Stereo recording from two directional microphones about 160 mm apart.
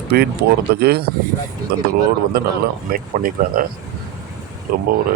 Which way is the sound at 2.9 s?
60° right (ahead or behind).